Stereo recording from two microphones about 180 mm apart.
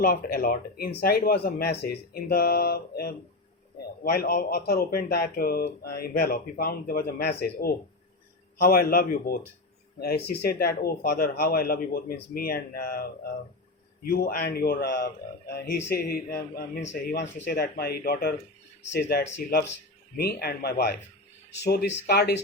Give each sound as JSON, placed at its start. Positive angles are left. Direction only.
{"t": 0.0, "sound": "speech", "side_deg": 55}
{"t": 14.1, "sound": "speech", "side_deg": 55}
{"t": 18.8, "sound": "speech", "side_deg": 75}